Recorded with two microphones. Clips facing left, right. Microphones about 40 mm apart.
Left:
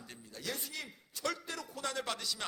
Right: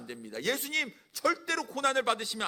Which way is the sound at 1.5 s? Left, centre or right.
Right.